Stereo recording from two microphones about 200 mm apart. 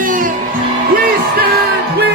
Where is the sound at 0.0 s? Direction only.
40° right (ahead or behind).